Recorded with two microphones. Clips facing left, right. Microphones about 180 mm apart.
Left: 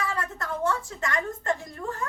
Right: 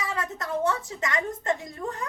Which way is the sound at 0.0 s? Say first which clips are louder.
Even; 20° right (ahead or behind).